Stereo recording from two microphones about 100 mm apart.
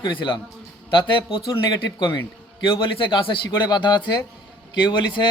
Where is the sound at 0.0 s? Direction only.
55° left (ahead or behind).